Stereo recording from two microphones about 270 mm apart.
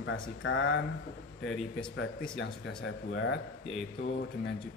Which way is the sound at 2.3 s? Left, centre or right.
Left.